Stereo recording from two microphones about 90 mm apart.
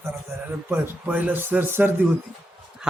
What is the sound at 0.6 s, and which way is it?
A man's voice, 25° right (ahead or behind).